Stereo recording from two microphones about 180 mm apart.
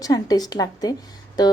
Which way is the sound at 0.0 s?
20° left (ahead or behind).